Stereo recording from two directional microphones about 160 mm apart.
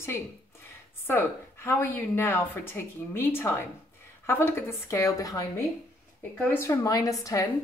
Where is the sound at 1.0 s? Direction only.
15° left (ahead or behind).